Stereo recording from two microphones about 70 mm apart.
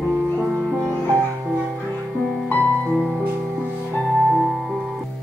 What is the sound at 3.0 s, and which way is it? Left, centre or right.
Music, centre.